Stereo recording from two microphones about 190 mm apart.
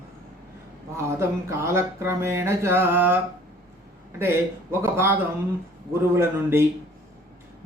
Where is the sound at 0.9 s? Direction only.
15° right (ahead or behind).